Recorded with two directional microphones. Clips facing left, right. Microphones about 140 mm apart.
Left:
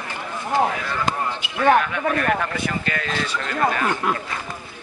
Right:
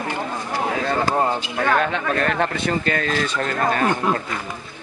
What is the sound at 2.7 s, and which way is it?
Speech, 40° right (ahead or behind).